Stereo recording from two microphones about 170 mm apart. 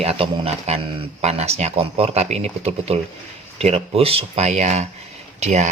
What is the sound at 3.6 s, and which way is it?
Speech, 35° right (ahead or behind).